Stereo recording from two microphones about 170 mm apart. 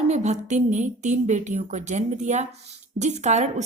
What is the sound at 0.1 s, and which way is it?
A woman's voice, 45° right (ahead or behind).